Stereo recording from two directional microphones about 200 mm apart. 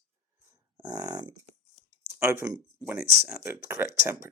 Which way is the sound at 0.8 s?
20° right (ahead or behind).